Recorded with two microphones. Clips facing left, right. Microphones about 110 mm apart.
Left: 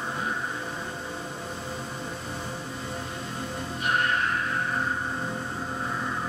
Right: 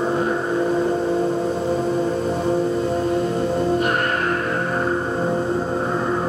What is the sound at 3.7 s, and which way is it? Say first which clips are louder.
Music: right 6 dB; 55° right (ahead or behind).